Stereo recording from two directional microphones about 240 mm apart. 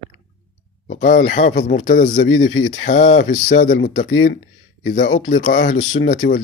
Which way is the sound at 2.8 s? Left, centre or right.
Left.